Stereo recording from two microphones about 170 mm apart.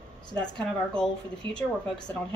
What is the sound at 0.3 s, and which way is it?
Speech, 5° left (ahead or behind).